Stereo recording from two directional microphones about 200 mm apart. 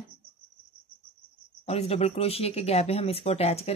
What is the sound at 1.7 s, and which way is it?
Speech, 30° left (ahead or behind).